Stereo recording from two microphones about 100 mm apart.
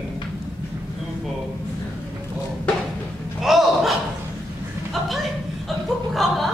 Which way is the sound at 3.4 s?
5° right (ahead or behind).